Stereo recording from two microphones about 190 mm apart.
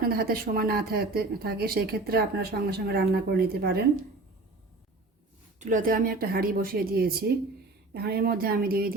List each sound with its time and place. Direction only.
0.0 s speech: 50° right (ahead or behind)
5.5 s speech: 45° right (ahead or behind)